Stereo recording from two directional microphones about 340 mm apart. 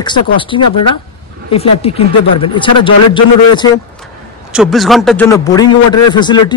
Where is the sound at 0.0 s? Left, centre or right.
Centre.